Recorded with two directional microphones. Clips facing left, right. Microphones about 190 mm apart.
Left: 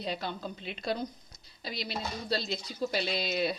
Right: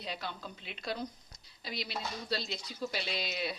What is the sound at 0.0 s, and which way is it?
Speech, 30° left (ahead or behind).